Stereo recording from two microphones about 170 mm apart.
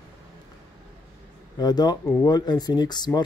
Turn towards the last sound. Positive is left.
turn(degrees=25)  # may be behind; listen again after turning